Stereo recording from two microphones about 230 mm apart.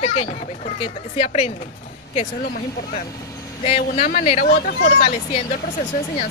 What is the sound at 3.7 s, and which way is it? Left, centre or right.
Speech, left.